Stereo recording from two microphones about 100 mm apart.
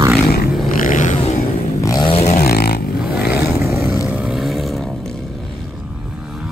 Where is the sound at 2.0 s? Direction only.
85° left.